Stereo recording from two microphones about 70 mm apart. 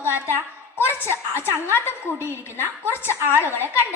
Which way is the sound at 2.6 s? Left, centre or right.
Right.